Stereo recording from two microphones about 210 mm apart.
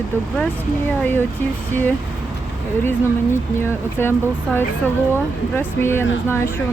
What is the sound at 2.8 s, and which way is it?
Speech, 10° left (ahead or behind).